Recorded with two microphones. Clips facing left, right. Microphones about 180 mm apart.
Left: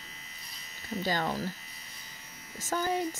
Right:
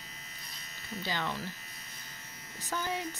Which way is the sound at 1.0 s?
45° left (ahead or behind).